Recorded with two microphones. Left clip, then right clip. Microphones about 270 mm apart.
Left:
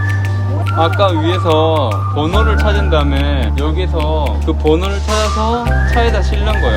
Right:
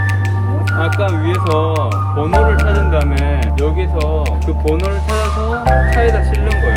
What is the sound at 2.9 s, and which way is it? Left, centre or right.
Speech, centre.